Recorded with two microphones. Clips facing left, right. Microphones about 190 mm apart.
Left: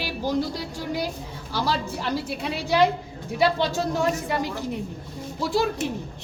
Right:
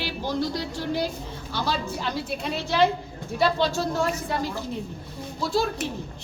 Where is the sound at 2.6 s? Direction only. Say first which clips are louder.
Left 2 dB; 15° left (ahead or behind).